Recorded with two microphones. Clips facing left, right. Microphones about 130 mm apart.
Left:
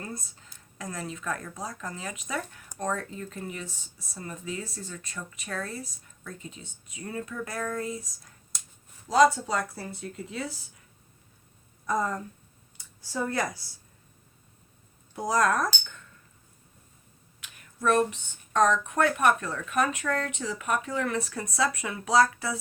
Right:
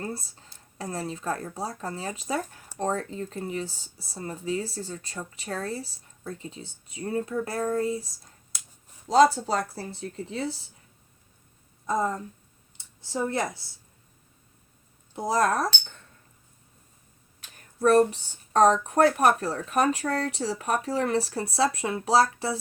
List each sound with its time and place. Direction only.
0.0 s speech: 30° right (ahead or behind)
11.9 s speech: 25° right (ahead or behind)
15.1 s speech: 25° right (ahead or behind)
17.4 s speech: 35° right (ahead or behind)